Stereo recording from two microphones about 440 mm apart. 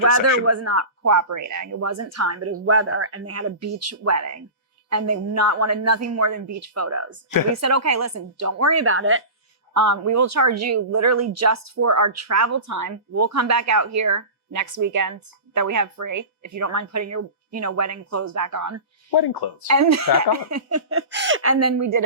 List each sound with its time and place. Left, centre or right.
0.0 s speech: right
9.7 s speech: right
19.1 s speech: left
19.6 s speech: right